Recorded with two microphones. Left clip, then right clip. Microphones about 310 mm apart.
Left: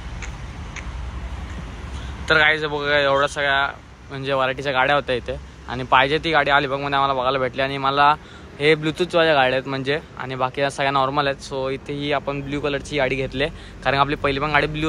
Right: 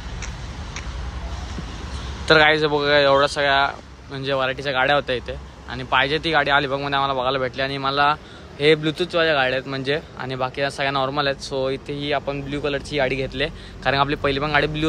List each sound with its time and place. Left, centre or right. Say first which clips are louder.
2.2 s speech: right 2 dB; centre